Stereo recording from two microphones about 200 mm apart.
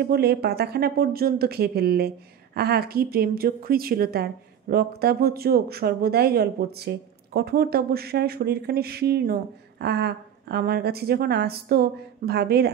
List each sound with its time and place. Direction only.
0.0 s speech: 50° right (ahead or behind)